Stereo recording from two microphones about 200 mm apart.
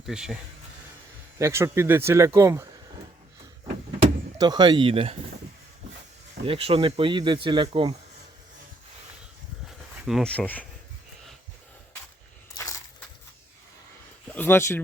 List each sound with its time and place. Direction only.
0.0 s speech: centre (ahead or behind)
1.4 s speech: 15° right (ahead or behind)
4.4 s speech: 20° right (ahead or behind)
6.4 s speech: 30° right (ahead or behind)
9.6 s a sound: centre (ahead or behind)
12.5 s a sound: 15° left (ahead or behind)
14.3 s speech: 10° left (ahead or behind)